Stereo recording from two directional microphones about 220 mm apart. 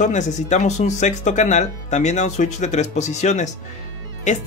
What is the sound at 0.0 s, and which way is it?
Speech, 35° left (ahead or behind).